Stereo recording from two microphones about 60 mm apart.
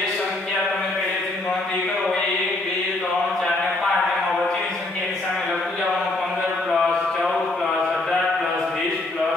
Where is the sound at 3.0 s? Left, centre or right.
Centre.